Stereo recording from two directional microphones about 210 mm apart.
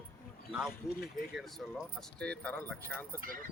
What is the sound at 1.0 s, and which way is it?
Speech, centre (ahead or behind).